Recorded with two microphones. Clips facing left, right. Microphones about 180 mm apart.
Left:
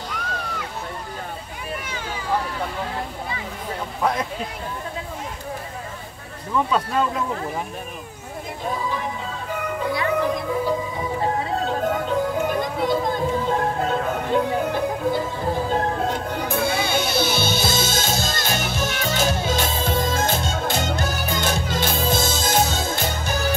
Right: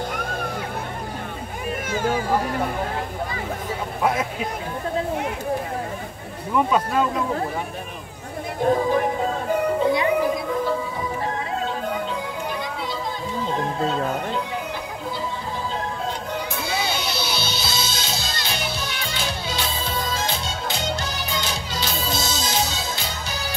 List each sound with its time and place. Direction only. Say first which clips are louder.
0.1 s music: right 3 dB; 50° right (ahead or behind)
1.9 s children playing: right 5 dB; 50° right (ahead or behind)
4.0 s speech: right 1 dB; 10° right (ahead or behind)
8.7 s music: right 7 dB; 50° right (ahead or behind)
9.8 s music: left 1 dB; 20° right (ahead or behind)
11.6 s music: left 3 dB; 45° left (ahead or behind)